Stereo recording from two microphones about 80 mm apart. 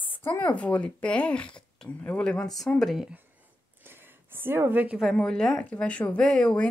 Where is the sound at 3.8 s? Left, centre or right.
Right.